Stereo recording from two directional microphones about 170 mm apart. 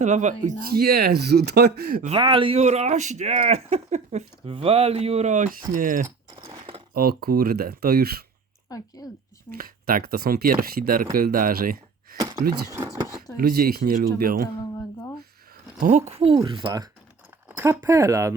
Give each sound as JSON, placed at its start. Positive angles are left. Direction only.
{"t": 0.0, "sound": "speech", "side_deg": -45}
{"t": 0.8, "sound": "speech", "side_deg": -65}
{"t": 2.0, "sound": "speech", "side_deg": -30}
{"t": 6.4, "sound": "a sound", "side_deg": -30}
{"t": 6.9, "sound": "speech", "side_deg": -60}
{"t": 8.7, "sound": "speech", "side_deg": 20}
{"t": 9.6, "sound": "speech", "side_deg": -60}
{"t": 13.3, "sound": "speech", "side_deg": -60}
{"t": 15.8, "sound": "speech", "side_deg": -40}
{"t": 17.6, "sound": "speech", "side_deg": -15}